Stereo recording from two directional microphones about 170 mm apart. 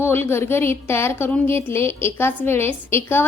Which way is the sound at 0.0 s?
15° left (ahead or behind).